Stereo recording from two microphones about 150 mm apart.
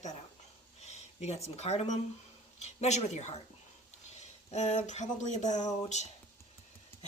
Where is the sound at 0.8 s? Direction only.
45° left (ahead or behind).